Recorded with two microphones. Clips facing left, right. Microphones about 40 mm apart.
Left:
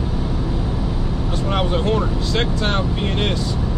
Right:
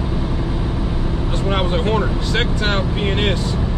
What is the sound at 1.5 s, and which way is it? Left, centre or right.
Speech, centre.